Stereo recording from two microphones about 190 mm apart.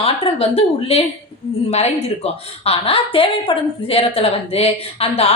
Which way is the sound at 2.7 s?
30° left (ahead or behind).